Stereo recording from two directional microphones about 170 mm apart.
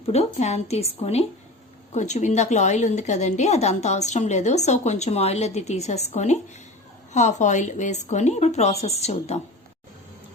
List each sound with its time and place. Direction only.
0.0 s a woman's voice: 40° left (ahead or behind)
1.9 s a woman's voice: 45° left (ahead or behind)